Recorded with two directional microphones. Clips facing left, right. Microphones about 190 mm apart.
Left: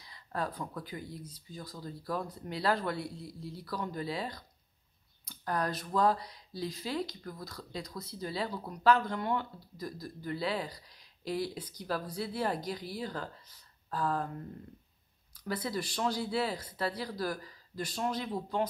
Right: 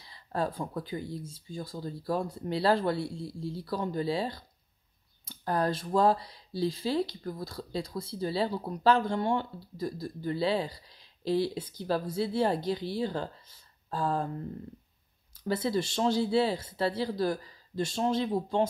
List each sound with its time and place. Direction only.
0.0 s speech: 30° right (ahead or behind)
15.3 s speech: 25° right (ahead or behind)